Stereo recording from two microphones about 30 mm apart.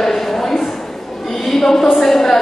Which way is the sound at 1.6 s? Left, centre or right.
Centre.